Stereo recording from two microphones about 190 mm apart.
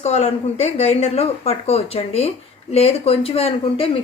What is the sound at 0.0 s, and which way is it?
Speech, 35° left (ahead or behind).